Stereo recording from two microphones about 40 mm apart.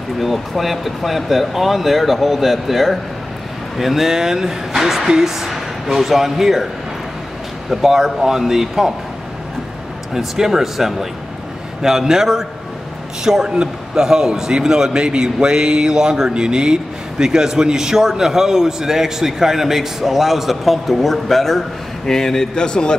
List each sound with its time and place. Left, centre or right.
0.2 s a man's voice: centre
7.7 s a man's voice: centre
10.1 s a man's voice: centre; by 22.9 s left